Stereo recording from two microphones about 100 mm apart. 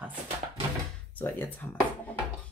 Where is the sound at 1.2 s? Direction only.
20° left (ahead or behind).